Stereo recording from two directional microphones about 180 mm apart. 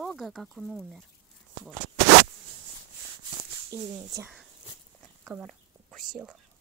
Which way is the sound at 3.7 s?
20° right (ahead or behind).